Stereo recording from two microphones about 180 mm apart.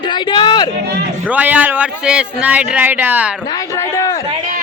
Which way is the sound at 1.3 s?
10° right (ahead or behind).